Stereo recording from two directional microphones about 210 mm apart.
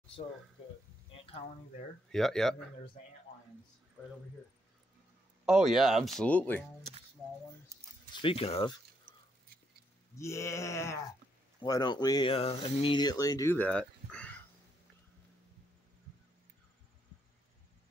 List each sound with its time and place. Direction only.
1.1 s speech: 25° left (ahead or behind)
2.0 s speech: centre (ahead or behind)
5.4 s speech: centre (ahead or behind)
8.1 s speech: 25° left (ahead or behind)
10.1 s speech: 15° left (ahead or behind)